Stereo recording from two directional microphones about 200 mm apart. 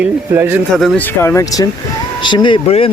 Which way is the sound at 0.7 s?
Centre (ahead or behind).